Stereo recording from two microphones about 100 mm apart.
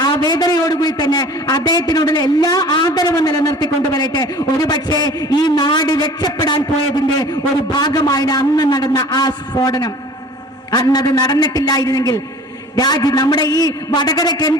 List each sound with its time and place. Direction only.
0.0 s a man's voice: 40° left (ahead or behind)